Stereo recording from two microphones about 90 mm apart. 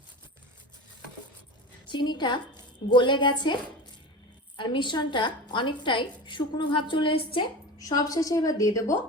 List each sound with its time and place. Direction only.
1.9 s a woman's voice: 60° left (ahead or behind); by 7.5 s 75° left (ahead or behind)
7.8 s a woman's voice: 45° left (ahead or behind)